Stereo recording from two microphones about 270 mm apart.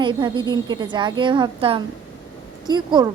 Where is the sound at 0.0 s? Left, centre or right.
Centre.